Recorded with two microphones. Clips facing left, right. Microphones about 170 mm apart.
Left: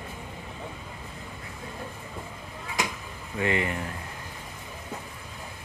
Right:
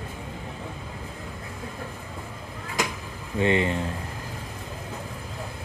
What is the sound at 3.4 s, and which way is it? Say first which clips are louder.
Speech: right 5 dB; 25° right (ahead or behind).